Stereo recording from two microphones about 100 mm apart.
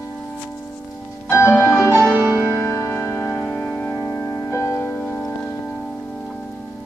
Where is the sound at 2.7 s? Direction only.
30° left (ahead or behind).